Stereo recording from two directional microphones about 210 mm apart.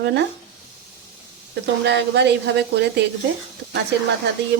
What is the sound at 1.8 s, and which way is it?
Speech, 55° right (ahead or behind).